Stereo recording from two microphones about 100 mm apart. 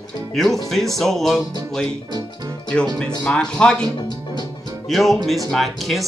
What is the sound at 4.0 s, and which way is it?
Music, 45° left (ahead or behind).